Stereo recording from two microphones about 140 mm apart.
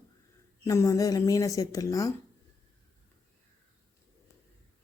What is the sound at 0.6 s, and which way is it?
Speech, 20° left (ahead or behind).